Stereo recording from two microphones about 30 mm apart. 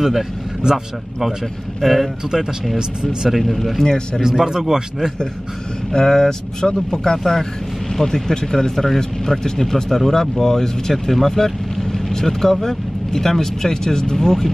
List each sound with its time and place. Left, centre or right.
0.7 s speech: right
1.8 s speech: centre
3.3 s speech: centre
3.8 s speech: left
4.2 s speech: centre
5.9 s speech: centre